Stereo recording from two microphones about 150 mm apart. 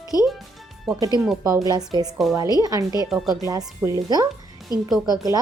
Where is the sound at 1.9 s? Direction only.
25° right (ahead or behind).